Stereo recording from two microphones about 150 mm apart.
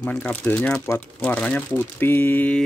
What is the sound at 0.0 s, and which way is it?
Speech, 10° left (ahead or behind).